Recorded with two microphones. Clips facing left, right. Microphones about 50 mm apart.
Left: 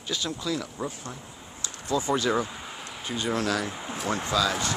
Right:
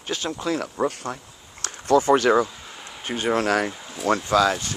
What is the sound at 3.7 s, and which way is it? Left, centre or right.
Speech, centre.